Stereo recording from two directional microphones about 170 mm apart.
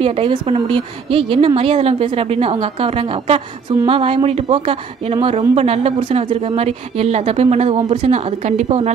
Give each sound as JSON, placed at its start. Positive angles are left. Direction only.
{"t": 0.0, "sound": "speech", "side_deg": -35}